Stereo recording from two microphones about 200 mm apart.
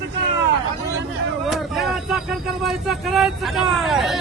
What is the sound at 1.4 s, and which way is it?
Vehicle, centre (ahead or behind).